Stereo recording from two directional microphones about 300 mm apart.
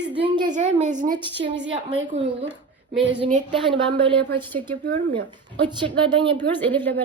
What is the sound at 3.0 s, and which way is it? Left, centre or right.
A woman's voice, right.